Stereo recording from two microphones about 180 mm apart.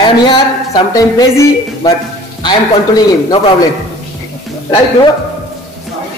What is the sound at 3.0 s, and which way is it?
Speech, 20° left (ahead or behind).